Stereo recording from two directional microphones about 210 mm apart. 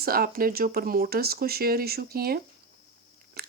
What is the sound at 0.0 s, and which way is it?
Speech, 45° right (ahead or behind).